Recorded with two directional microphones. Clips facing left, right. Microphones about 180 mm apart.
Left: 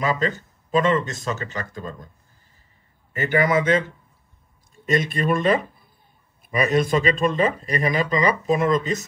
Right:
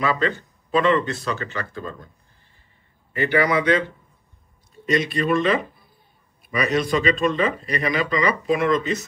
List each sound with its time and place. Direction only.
0.0 s speech: 40° left (ahead or behind)
3.1 s speech: 45° left (ahead or behind)
4.9 s speech: 50° left (ahead or behind)